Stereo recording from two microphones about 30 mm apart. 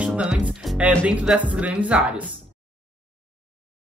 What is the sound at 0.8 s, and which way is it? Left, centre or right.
Speech, right.